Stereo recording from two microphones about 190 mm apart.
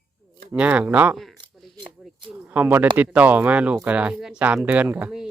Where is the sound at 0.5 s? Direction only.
5° right (ahead or behind).